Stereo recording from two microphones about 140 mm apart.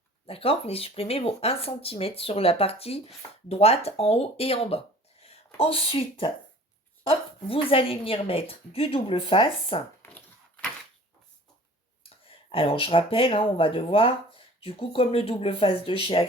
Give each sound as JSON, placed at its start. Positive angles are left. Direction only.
{"t": 0.3, "sound": "speech", "side_deg": 45}
{"t": 12.0, "sound": "speech", "side_deg": 40}